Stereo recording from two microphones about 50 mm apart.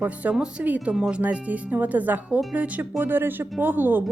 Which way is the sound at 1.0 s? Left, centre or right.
Right.